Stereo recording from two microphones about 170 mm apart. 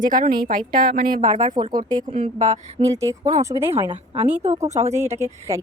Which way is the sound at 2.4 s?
45° right (ahead or behind).